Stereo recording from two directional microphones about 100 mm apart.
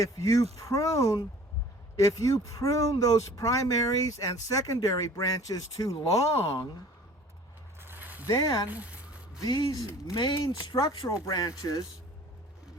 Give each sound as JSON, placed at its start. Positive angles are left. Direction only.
{"t": 0.0, "sound": "speech", "side_deg": 35}
{"t": 7.8, "sound": "a sound", "side_deg": -20}
{"t": 8.3, "sound": "speech", "side_deg": 40}
{"t": 8.7, "sound": "a sound", "side_deg": -15}
{"t": 9.4, "sound": "speech", "side_deg": 45}
{"t": 10.2, "sound": "speech", "side_deg": 55}